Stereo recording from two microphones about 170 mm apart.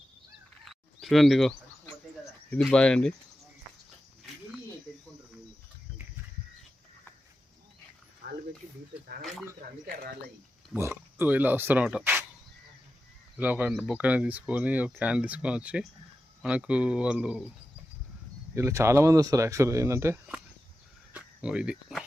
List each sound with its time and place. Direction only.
0.6 s bird: centre (ahead or behind)
2.5 s speech: 5° left (ahead or behind)
8.2 s a sound: 55° right (ahead or behind)
10.8 s speech: 15° right (ahead or behind)
13.3 s speech: 10° right (ahead or behind)
18.5 s speech: 15° right (ahead or behind)
21.1 s cricket: 5° right (ahead or behind)